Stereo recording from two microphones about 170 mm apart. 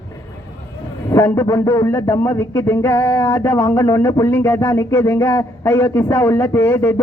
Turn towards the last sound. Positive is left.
turn(degrees=15)  # may be behind; listen again after turning